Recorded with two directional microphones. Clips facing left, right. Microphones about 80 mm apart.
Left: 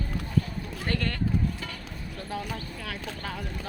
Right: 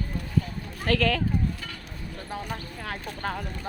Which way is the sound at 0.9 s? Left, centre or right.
Right.